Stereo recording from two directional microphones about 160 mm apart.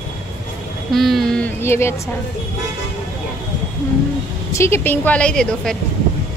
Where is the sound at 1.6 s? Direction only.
15° left (ahead or behind).